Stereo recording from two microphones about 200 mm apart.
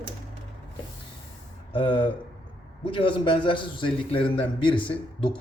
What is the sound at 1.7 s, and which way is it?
A man's voice, 25° left (ahead or behind).